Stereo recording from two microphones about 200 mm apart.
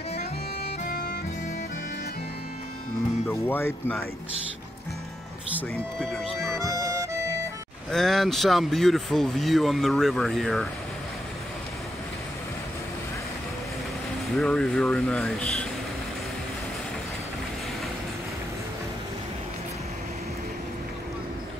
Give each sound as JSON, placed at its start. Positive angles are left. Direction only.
{"t": 3.3, "sound": "speech", "side_deg": 10}
{"t": 6.6, "sound": "music", "side_deg": -15}
{"t": 7.9, "sound": "speech", "side_deg": 0}
{"t": 14.3, "sound": "speech", "side_deg": 5}